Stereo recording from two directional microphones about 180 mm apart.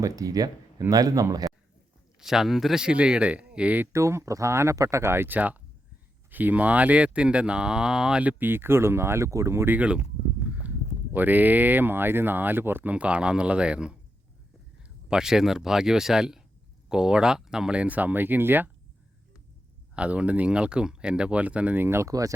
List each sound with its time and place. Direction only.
0.0 s speech: 20° right (ahead or behind)
2.2 s speech: centre (ahead or behind)
11.1 s speech: 10° right (ahead or behind)
20.0 s speech: 5° right (ahead or behind)